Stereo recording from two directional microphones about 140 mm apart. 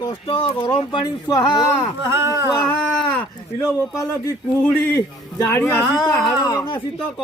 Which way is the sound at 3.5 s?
25° left (ahead or behind).